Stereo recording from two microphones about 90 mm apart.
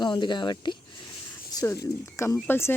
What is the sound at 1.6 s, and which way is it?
Speech, 30° left (ahead or behind).